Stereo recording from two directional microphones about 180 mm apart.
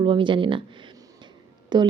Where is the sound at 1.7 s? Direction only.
25° right (ahead or behind).